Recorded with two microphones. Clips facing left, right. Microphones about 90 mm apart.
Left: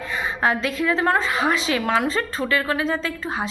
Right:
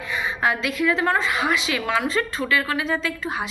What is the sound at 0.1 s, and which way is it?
A woman's voice, 40° left (ahead or behind).